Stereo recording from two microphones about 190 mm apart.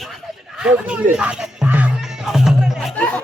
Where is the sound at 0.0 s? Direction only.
Centre (ahead or behind).